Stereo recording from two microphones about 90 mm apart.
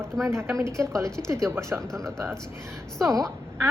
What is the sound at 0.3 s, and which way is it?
A woman's voice, 30° right (ahead or behind).